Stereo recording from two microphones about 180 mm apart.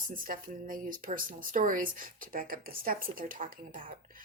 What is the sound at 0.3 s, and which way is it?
A woman's voice, 50° right (ahead or behind).